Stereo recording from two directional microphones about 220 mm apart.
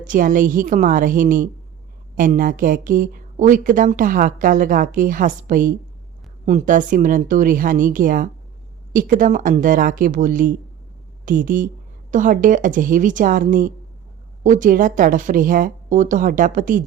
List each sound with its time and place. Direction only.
0.0 s a woman's voice: 35° right (ahead or behind)